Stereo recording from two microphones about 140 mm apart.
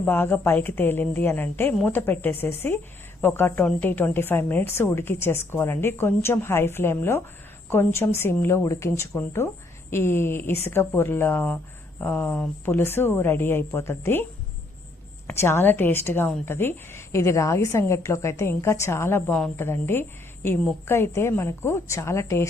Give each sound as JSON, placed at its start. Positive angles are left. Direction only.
{"t": 0.0, "sound": "a woman's voice", "side_deg": 15}
{"t": 15.3, "sound": "a woman's voice", "side_deg": 15}